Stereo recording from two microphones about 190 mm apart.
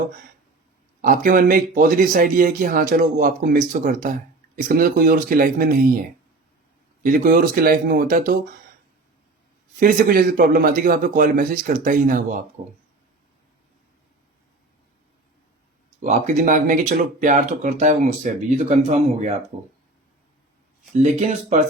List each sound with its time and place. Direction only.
1.0 s speech: 45° right (ahead or behind)
7.0 s speech: 50° right (ahead or behind)
9.8 s speech: 50° right (ahead or behind)
16.0 s speech: 40° right (ahead or behind)
20.9 s speech: 35° right (ahead or behind)